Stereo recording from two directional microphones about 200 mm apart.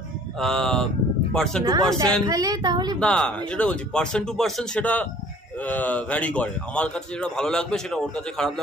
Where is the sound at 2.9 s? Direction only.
5° left (ahead or behind).